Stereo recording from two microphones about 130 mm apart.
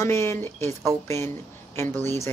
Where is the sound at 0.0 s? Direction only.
20° left (ahead or behind).